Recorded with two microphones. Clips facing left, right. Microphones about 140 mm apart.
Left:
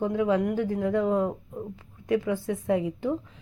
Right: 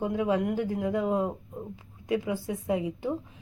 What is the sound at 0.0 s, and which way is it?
Speech, 20° right (ahead or behind).